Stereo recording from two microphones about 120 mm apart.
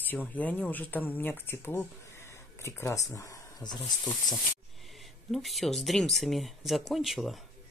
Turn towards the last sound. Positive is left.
turn(degrees=0)  # may be behind; listen again after turning